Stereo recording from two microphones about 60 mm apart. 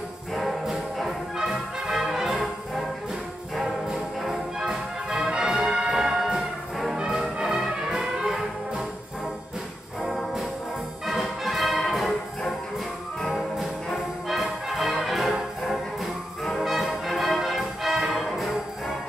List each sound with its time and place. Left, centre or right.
0.3 s music: centre
1.4 s brass instrument: centre
4.2 s music: centre
10.0 s music: centre
14.3 s music: centre